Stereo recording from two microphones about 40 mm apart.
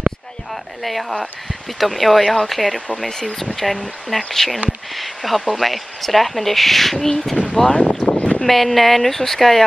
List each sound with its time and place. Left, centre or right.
0.8 s speech: centre
3.0 s speech: centre
7.5 s speech: centre
8.0 s a sound: left
8.4 s speech: centre